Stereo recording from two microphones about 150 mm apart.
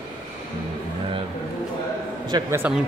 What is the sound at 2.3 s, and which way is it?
Speech, 20° right (ahead or behind).